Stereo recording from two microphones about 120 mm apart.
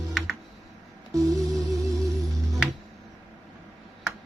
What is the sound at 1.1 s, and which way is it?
Music, 30° right (ahead or behind).